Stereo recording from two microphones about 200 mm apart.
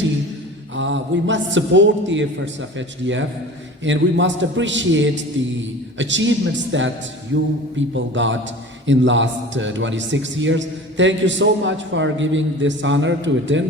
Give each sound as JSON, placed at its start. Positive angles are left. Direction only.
{"t": 0.8, "sound": "a man's voice", "side_deg": -70}